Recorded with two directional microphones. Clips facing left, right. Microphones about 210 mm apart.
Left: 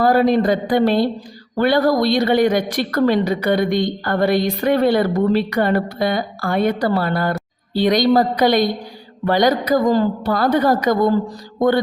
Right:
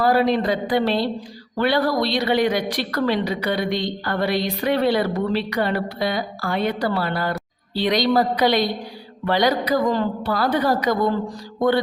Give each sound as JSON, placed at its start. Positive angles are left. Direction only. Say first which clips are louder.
{"t": 0.0, "sound": "a woman's voice", "louder": "left 4 dB", "side_deg": 45}